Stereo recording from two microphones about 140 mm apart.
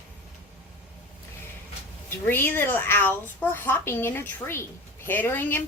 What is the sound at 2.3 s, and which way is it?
Speech, 15° left (ahead or behind).